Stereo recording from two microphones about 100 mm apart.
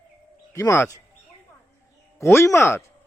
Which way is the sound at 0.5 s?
30° left (ahead or behind).